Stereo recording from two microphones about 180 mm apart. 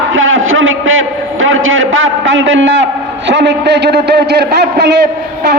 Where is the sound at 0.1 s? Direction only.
90° right.